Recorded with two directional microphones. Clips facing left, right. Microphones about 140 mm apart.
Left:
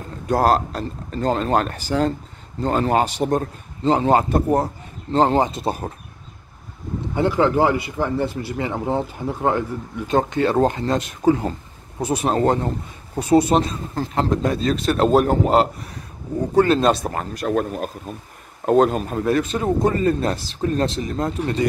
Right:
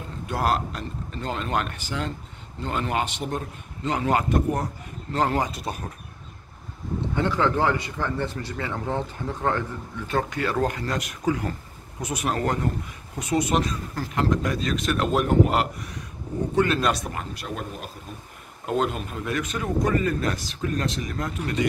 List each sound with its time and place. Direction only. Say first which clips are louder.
0.3 s speech: left 7 dB; 40° left (ahead or behind)
7.2 s speech: left 6 dB; 15° left (ahead or behind); by 17.1 s 30° left (ahead or behind)
17.1 s speech: left 11 dB; 45° left (ahead or behind)